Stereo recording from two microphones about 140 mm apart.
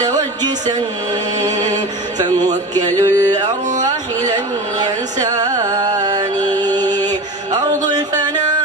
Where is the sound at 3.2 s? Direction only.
30° right (ahead or behind).